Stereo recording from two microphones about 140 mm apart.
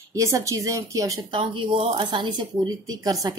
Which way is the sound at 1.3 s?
35° right (ahead or behind).